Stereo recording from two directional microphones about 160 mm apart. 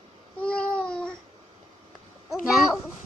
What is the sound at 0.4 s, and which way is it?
Babbling, 5° left (ahead or behind).